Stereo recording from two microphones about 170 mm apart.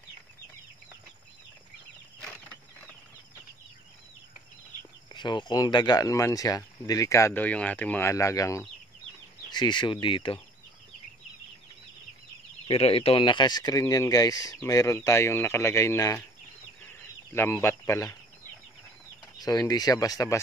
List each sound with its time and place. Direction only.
5.1 s speech: 25° left (ahead or behind)
12.6 s speech: 35° left (ahead or behind); by 16.3 s 15° left (ahead or behind)
17.3 s speech: 15° left (ahead or behind)
19.4 s speech: 20° left (ahead or behind)